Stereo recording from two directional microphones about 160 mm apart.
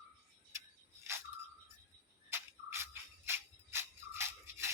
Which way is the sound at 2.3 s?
15° right (ahead or behind).